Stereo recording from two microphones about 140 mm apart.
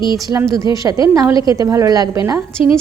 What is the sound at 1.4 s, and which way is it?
Speech, 25° right (ahead or behind).